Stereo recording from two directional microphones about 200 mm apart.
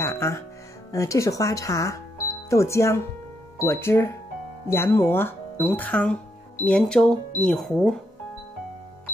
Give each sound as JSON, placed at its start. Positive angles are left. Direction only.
{"t": 0.0, "sound": "music", "side_deg": 15}
{"t": 0.9, "sound": "speech", "side_deg": 15}